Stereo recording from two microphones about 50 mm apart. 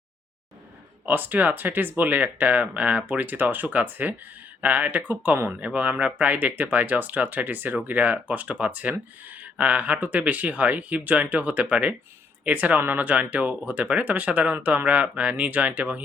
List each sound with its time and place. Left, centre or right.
1.0 s speech: right